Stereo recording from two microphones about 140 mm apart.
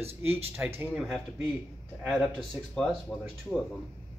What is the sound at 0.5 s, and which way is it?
Speech, 15° right (ahead or behind).